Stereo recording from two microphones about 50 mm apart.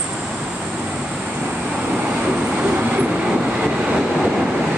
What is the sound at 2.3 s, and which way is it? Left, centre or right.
Vehicle, right.